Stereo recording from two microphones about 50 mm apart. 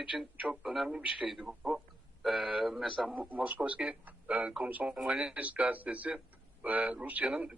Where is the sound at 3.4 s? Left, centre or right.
Right.